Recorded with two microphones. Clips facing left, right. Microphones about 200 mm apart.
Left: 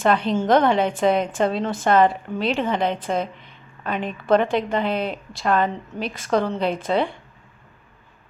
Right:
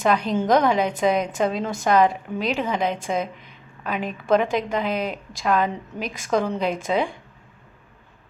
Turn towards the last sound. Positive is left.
turn(degrees=-5)  # may be behind; listen again after turning